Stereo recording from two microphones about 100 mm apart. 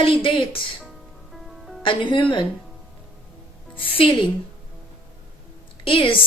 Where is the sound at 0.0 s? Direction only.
60° left (ahead or behind).